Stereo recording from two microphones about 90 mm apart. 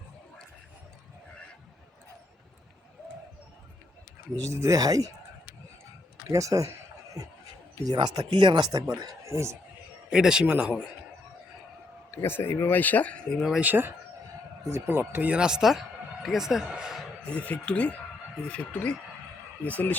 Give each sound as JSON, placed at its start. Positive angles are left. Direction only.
{"t": 4.4, "sound": "speech", "side_deg": -35}
{"t": 6.2, "sound": "a sound", "side_deg": -40}
{"t": 7.9, "sound": "speech", "side_deg": -45}
{"t": 8.2, "sound": "speech", "side_deg": -65}
{"t": 8.9, "sound": "speech", "side_deg": -35}
{"t": 10.1, "sound": "speech", "side_deg": -10}
{"t": 12.2, "sound": "speech", "side_deg": 25}
{"t": 13.6, "sound": "a man's voice", "side_deg": -20}
{"t": 17.2, "sound": "speech", "side_deg": 15}